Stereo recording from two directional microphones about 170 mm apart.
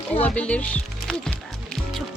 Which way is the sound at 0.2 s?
5° left (ahead or behind).